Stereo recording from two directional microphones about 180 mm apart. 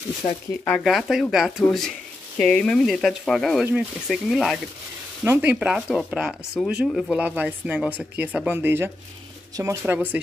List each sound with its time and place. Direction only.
0.7 s speech: centre (ahead or behind)
5.2 s speech: 10° right (ahead or behind)